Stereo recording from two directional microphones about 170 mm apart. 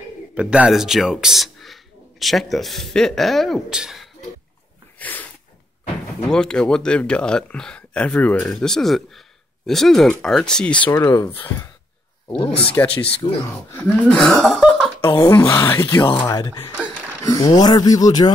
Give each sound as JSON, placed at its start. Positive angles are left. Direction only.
{"t": 0.3, "sound": "speech", "side_deg": -5}
{"t": 4.9, "sound": "sneeze", "side_deg": 10}
{"t": 6.3, "sound": "speech", "side_deg": 5}
{"t": 10.9, "sound": "speech", "side_deg": 15}
{"t": 12.3, "sound": "speech", "side_deg": 30}
{"t": 13.7, "sound": "speech", "side_deg": 5}
{"t": 15.0, "sound": "speech", "side_deg": 20}